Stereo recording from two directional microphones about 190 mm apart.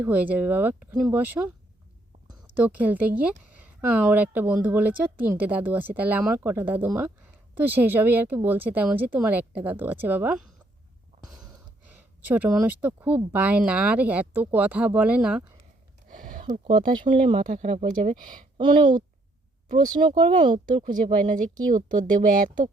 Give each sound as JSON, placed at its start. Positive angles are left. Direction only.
{"t": 0.0, "sound": "speech", "side_deg": -10}
{"t": 2.6, "sound": "speech", "side_deg": -10}
{"t": 11.9, "sound": "speech", "side_deg": -10}
{"t": 16.0, "sound": "a sound", "side_deg": -45}
{"t": 17.3, "sound": "speech", "side_deg": -40}
{"t": 18.6, "sound": "speech", "side_deg": -25}
{"t": 20.1, "sound": "speech", "side_deg": -40}
{"t": 20.4, "sound": "speech", "side_deg": -25}
{"t": 20.8, "sound": "speech", "side_deg": -40}